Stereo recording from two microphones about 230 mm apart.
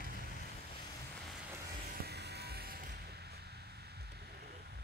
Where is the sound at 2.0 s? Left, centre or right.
Right.